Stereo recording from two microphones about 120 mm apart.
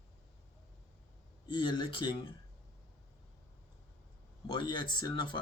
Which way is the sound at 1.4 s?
40° left (ahead or behind).